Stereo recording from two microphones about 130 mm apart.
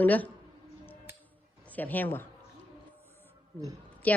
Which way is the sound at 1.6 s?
15° left (ahead or behind).